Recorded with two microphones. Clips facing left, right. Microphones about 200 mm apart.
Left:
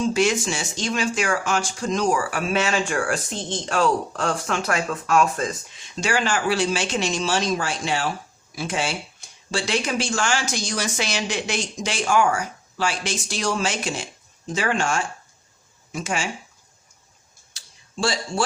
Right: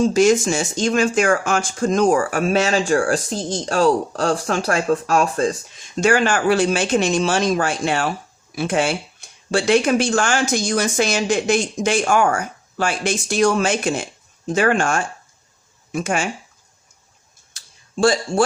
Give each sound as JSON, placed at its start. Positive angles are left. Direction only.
{"t": 0.0, "sound": "speech", "side_deg": -40}
{"t": 6.0, "sound": "speech", "side_deg": -55}
{"t": 17.5, "sound": "a sound", "side_deg": -50}